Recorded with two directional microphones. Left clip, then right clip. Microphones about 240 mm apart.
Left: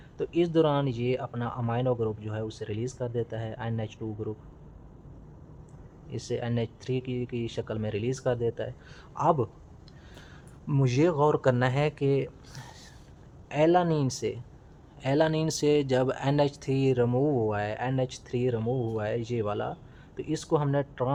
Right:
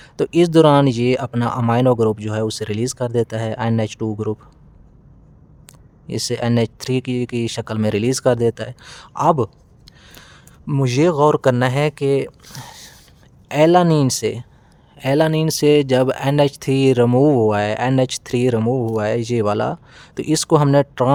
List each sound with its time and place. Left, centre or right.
0.0 s speech: right
6.1 s speech: right